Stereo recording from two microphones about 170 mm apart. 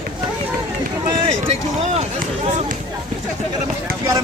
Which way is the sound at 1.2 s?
40° right (ahead or behind).